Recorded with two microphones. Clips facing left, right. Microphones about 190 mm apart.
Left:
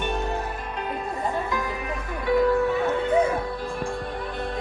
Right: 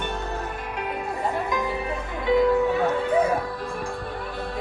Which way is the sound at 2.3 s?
20° right (ahead or behind).